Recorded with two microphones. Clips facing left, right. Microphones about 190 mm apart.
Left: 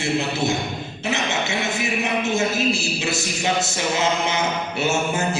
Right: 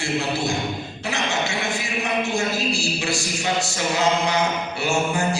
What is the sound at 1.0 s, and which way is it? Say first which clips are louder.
A man's voice: left 1 dB; 20° left (ahead or behind).